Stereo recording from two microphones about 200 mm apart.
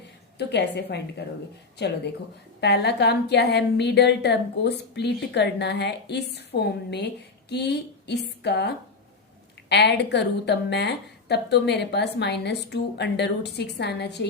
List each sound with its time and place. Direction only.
0.3 s a woman's voice: 60° left (ahead or behind)
2.6 s a woman's voice: 55° left (ahead or behind)